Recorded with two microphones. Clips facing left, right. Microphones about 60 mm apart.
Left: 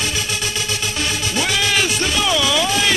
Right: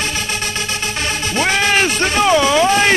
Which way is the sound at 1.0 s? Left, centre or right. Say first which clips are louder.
Right 3 dB; right.